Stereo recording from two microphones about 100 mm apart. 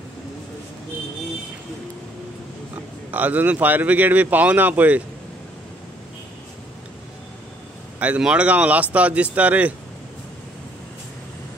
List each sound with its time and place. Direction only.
3.1 s speech: 15° right (ahead or behind)
8.0 s speech: 10° right (ahead or behind)